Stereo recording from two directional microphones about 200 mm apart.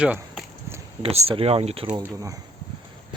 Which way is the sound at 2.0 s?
15° right (ahead or behind).